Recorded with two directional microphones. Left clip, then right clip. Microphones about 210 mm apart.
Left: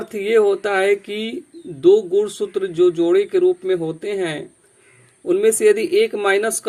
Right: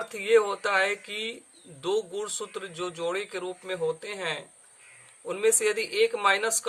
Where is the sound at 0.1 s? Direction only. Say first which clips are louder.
Left 7 dB; 15° left (ahead or behind).